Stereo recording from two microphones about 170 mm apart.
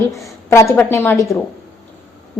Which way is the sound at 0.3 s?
20° left (ahead or behind).